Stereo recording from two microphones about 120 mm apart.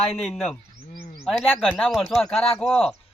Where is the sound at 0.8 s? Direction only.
65° left (ahead or behind).